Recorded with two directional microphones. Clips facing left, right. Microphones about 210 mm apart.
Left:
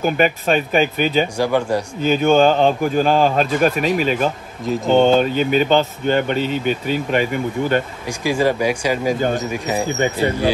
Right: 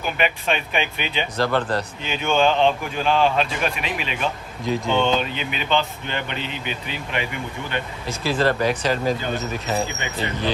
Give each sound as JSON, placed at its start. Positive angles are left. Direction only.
{"t": 0.0, "sound": "speech", "side_deg": 40}
{"t": 1.4, "sound": "speech", "side_deg": 10}
{"t": 2.0, "sound": "speech", "side_deg": 45}
{"t": 4.6, "sound": "speech", "side_deg": 0}
{"t": 5.0, "sound": "speech", "side_deg": 45}
{"t": 8.1, "sound": "speech", "side_deg": 15}
{"t": 9.8, "sound": "speech", "side_deg": 45}
{"t": 10.1, "sound": "speech", "side_deg": 10}